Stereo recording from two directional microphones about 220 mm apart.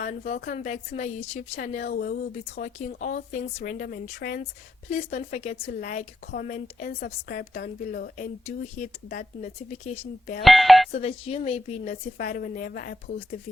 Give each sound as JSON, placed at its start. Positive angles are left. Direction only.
{"t": 0.0, "sound": "speech", "side_deg": 40}
{"t": 4.9, "sound": "speech", "side_deg": 30}
{"t": 10.4, "sound": "speech", "side_deg": 0}
{"t": 10.9, "sound": "speech", "side_deg": 30}
{"t": 12.1, "sound": "speech", "side_deg": 40}